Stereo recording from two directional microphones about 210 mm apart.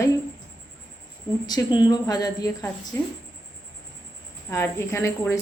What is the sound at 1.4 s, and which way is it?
A woman's voice, 20° left (ahead or behind).